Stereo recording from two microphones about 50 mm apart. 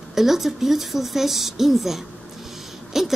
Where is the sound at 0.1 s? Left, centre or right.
Centre.